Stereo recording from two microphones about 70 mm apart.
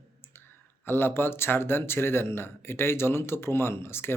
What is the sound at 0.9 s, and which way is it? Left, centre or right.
Speech, left.